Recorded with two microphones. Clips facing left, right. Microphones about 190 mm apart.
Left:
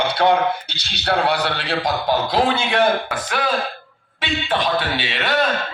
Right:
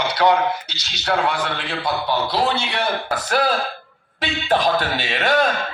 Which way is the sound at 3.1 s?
40° right (ahead or behind).